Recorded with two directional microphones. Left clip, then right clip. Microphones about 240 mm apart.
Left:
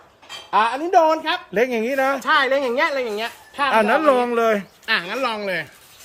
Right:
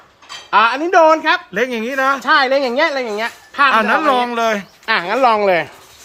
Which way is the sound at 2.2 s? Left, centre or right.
Right.